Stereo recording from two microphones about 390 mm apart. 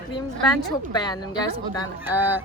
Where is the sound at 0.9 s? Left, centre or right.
Centre.